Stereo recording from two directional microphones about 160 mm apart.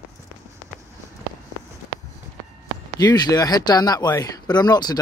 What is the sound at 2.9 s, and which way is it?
Speech, 25° left (ahead or behind).